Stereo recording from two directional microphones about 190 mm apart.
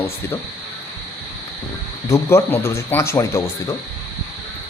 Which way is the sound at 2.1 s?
15° left (ahead or behind).